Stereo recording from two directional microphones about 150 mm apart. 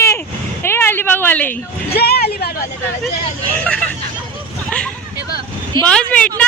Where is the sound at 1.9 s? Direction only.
90° left.